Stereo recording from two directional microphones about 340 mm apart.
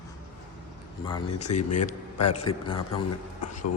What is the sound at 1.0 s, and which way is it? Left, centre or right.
A man's voice, centre.